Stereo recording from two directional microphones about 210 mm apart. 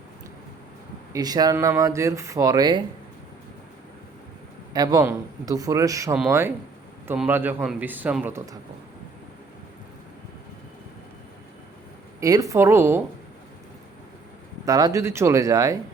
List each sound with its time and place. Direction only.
1.1 s speech: 20° right (ahead or behind)
4.7 s speech: 20° right (ahead or behind)
12.2 s speech: 15° right (ahead or behind)
14.6 s speech: 20° right (ahead or behind)